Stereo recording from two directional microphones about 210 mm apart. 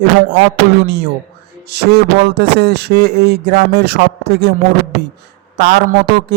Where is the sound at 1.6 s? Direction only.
50° right (ahead or behind).